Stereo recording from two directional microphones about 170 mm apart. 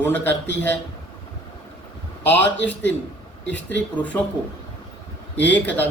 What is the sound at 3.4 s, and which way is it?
Speech, 90° left.